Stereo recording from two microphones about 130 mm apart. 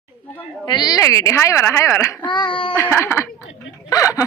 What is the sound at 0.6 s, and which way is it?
Speech, 30° left (ahead or behind).